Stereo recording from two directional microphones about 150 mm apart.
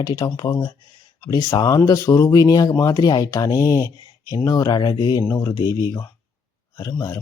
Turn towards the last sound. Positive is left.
turn(degrees=20)  # may be behind; listen again after turning